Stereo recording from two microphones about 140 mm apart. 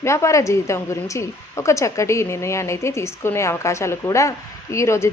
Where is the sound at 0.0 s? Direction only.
20° left (ahead or behind).